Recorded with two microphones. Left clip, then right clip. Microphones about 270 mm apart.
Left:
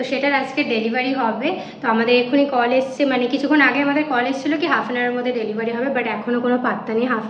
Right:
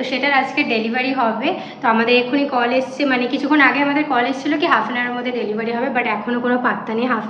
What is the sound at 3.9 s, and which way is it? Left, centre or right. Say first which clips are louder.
A woman's voice: right 2 dB; centre.